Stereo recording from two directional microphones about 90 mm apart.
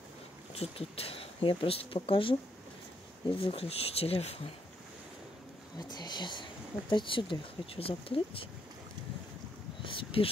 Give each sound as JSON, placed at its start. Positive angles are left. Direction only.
{"t": 0.6, "sound": "speech", "side_deg": 90}
{"t": 5.8, "sound": "speech", "side_deg": 55}
{"t": 9.8, "sound": "speech", "side_deg": 75}